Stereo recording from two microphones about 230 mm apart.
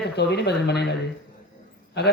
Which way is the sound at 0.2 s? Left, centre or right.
Left.